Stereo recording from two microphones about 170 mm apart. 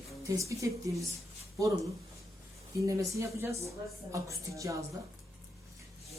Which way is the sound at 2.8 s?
20° right (ahead or behind).